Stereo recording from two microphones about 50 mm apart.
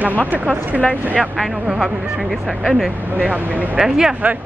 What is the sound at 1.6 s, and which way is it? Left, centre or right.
Speech, centre.